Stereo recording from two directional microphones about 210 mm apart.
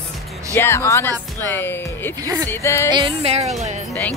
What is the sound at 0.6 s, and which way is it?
Speech, 10° left (ahead or behind).